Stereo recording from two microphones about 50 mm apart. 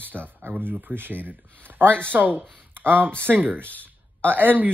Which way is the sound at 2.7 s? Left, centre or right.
Right.